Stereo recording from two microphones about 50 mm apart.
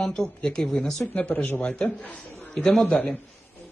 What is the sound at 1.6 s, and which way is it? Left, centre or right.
Speech, left.